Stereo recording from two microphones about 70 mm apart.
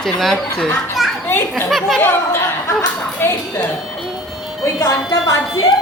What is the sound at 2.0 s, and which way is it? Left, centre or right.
Speech, left.